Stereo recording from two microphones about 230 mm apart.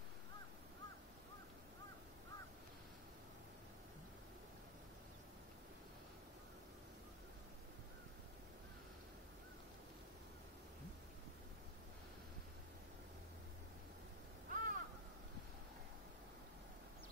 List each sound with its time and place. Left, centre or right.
14.5 s crow: right